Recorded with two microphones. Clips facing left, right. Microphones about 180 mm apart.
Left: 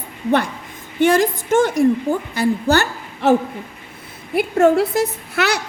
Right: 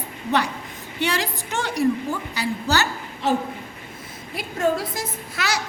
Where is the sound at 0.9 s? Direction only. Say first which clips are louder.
Left 10 dB; 50° left (ahead or behind).